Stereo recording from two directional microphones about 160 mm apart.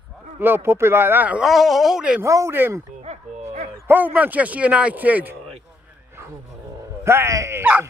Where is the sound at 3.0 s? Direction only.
45° right (ahead or behind).